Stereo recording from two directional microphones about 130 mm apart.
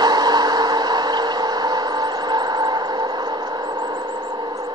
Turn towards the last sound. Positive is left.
turn(degrees=-30)  # may be behind; listen again after turning